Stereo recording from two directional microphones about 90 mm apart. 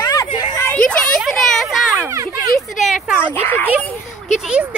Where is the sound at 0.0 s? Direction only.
40° left (ahead or behind).